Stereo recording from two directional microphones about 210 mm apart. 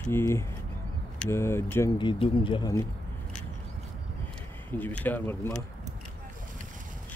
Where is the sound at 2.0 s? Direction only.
25° left (ahead or behind).